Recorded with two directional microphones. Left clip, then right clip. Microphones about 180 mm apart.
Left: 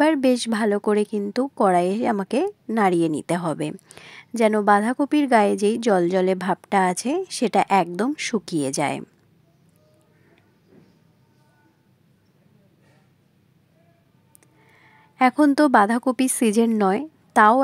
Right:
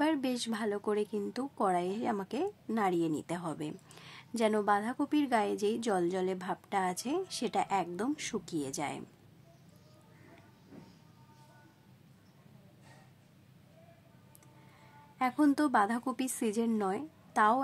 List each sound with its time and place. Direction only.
0.0 s a woman's voice: 40° left (ahead or behind)
15.1 s a woman's voice: 40° left (ahead or behind)